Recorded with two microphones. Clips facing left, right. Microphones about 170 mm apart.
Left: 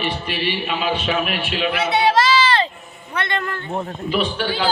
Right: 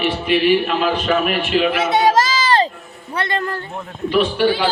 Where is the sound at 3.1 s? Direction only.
35° right (ahead or behind).